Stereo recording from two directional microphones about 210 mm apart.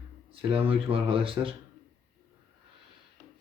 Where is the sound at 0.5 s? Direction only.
25° right (ahead or behind).